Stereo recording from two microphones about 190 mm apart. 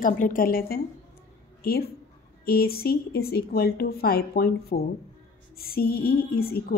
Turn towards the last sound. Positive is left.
turn(degrees=55)  # may be behind; listen again after turning